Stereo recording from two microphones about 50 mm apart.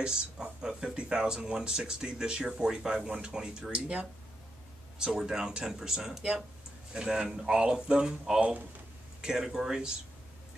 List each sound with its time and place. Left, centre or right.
0.0 s speech: centre
9.2 s speech: centre